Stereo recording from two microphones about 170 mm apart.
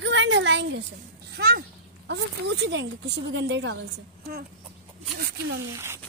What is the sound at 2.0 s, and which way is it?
Speech, 85° right.